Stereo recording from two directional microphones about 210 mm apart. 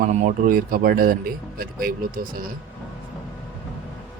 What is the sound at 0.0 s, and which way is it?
Speech, 40° right (ahead or behind).